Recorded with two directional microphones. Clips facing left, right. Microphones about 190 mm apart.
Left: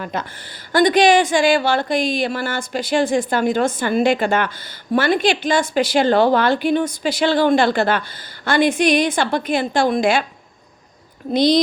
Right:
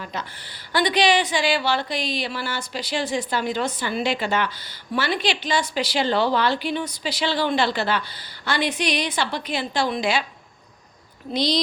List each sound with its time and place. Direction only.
0.0 s a woman's voice: 50° left (ahead or behind)
11.3 s a woman's voice: 50° left (ahead or behind)